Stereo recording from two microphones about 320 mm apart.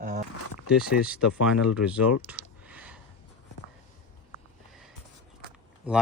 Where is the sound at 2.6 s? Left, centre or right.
Centre.